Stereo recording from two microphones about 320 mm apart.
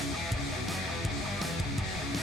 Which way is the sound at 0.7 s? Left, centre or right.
Centre.